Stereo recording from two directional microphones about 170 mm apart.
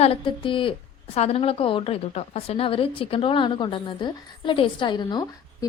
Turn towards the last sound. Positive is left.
turn(degrees=25)  # may be behind; listen again after turning